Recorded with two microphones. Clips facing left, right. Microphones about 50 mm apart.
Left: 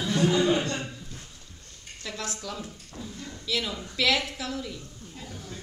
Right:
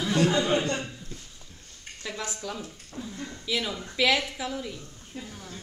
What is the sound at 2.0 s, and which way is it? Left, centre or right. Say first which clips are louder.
A woman's voice: right 1 dB; centre.